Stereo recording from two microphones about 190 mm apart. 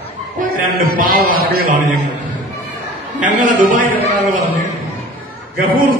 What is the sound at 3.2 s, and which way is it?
Speech, 45° right (ahead or behind).